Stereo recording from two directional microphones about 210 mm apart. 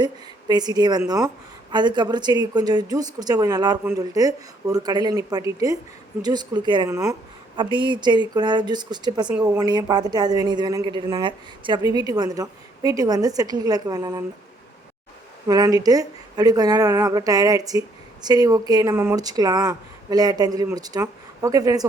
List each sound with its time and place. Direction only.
0.0 s a woman's voice: 20° right (ahead or behind)
15.4 s speech: 15° right (ahead or behind)